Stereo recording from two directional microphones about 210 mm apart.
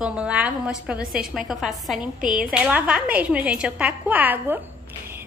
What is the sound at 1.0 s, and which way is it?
Speech, 45° right (ahead or behind).